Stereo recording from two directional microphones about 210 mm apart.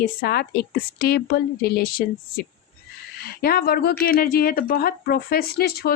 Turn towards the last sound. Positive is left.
turn(degrees=45)  # may be behind; listen again after turning